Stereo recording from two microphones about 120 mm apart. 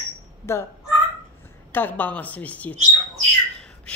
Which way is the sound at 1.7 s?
15° left (ahead or behind).